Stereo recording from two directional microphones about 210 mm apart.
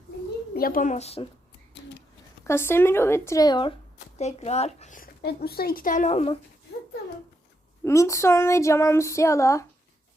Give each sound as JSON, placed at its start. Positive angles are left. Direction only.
{"t": 0.5, "sound": "speech", "side_deg": 45}
{"t": 2.4, "sound": "speech", "side_deg": 10}
{"t": 7.9, "sound": "child singing", "side_deg": 15}